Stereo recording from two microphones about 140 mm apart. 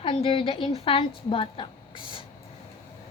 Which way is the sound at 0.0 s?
40° left (ahead or behind).